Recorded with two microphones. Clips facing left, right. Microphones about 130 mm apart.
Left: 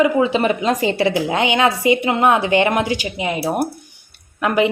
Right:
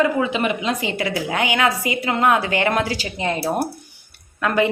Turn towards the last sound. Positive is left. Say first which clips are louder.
# left 2 dB
turn(degrees=20)  # may be behind; listen again after turning